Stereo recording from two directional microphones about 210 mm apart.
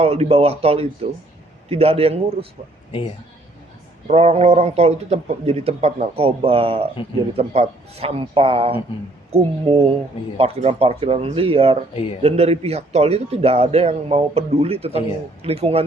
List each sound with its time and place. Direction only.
0.0 s a man's voice: 30° right (ahead or behind)
4.0 s a man's voice: 30° right (ahead or behind)